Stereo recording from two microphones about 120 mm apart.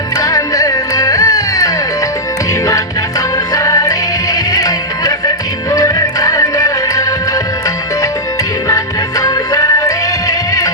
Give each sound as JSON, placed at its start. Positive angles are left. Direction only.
{"t": 0.2, "sound": "music", "side_deg": 30}
{"t": 3.5, "sound": "music", "side_deg": 25}
{"t": 8.6, "sound": "music", "side_deg": 25}